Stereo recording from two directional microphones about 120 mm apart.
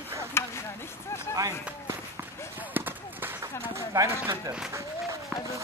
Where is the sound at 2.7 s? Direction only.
15° right (ahead or behind).